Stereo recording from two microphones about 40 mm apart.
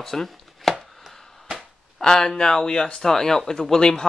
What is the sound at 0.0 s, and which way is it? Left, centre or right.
Chopping, centre.